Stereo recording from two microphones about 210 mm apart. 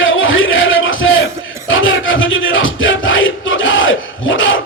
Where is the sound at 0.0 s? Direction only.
70° left (ahead or behind).